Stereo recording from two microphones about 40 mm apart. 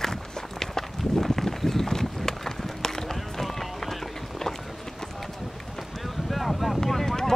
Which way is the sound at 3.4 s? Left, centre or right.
Centre.